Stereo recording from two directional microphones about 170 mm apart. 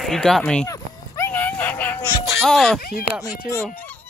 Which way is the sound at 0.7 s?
15° left (ahead or behind).